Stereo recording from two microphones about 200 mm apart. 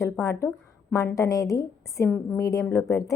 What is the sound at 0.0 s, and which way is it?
A woman's voice, 15° left (ahead or behind).